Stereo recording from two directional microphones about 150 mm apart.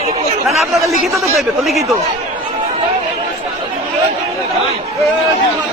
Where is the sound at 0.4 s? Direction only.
Centre (ahead or behind).